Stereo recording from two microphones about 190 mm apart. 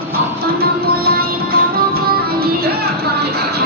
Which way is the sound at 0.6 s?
55° right (ahead or behind).